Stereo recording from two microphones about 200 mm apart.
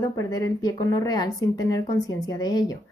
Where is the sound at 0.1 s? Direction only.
15° left (ahead or behind).